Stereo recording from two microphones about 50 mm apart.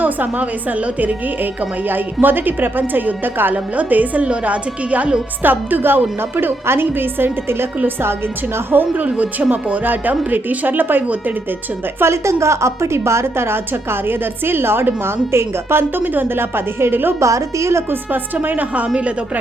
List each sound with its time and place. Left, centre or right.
0.0 s a woman's voice: right
1.9 s a woman's voice: right
5.4 s a woman's voice: right
8.7 s a woman's voice: right
11.9 s a woman's voice: right
14.1 s a woman's voice: right
17.2 s a woman's voice: right